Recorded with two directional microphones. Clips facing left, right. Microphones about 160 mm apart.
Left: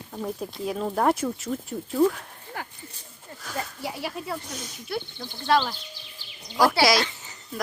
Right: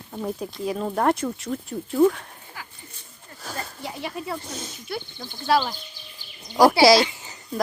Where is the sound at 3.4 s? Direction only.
30° right (ahead or behind).